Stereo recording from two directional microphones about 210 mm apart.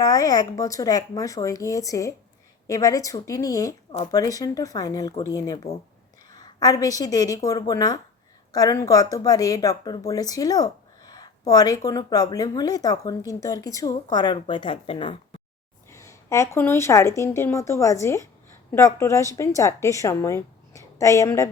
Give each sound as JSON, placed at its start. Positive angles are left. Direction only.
{"t": 0.0, "sound": "speech", "side_deg": 15}
{"t": 15.9, "sound": "speech", "side_deg": 15}